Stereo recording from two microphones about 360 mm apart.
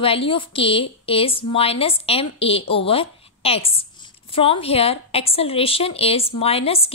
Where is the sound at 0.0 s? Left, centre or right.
Centre.